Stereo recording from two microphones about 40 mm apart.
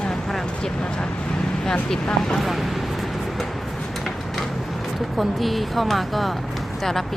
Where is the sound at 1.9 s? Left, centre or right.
Centre.